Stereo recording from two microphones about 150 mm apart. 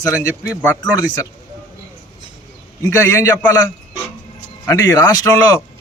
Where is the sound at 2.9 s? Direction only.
20° left (ahead or behind).